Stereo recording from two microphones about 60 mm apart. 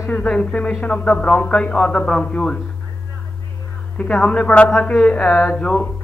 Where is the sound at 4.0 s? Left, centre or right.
Centre.